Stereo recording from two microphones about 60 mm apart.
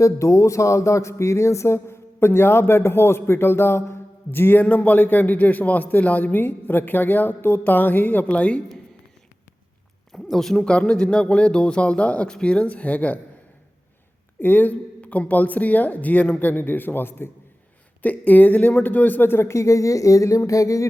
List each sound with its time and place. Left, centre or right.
0.0 s a sound: left
4.6 s a man's voice: left
10.1 s speech: centre
10.7 s a man's voice: centre
14.4 s a man's voice: left
18.0 s speech: left
20.5 s a sound: left